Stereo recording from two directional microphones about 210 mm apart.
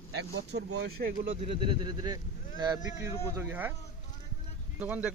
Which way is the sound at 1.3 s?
25° right (ahead or behind).